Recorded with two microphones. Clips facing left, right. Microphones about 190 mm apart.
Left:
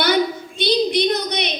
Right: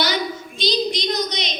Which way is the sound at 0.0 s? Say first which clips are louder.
Left 5 dB; 60° left (ahead or behind).